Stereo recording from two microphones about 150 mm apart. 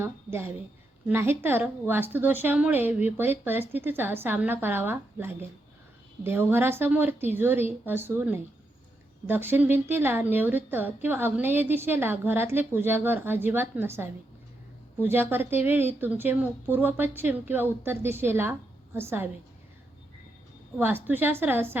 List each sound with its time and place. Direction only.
0.0 s a woman's voice: 15° right (ahead or behind)
20.7 s a woman's voice: 15° right (ahead or behind)